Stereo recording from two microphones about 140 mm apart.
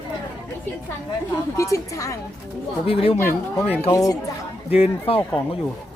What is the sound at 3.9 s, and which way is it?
Speech, 25° left (ahead or behind).